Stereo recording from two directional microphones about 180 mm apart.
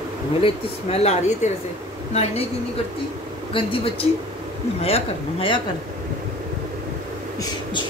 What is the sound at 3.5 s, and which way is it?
Speech, 30° left (ahead or behind).